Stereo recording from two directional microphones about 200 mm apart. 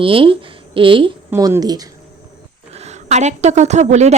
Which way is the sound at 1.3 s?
15° right (ahead or behind).